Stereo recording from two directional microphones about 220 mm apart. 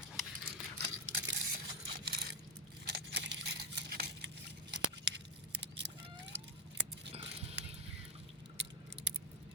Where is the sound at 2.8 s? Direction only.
50° right (ahead or behind).